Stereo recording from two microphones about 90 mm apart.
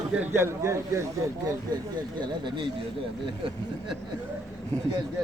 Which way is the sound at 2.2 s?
60° right (ahead or behind).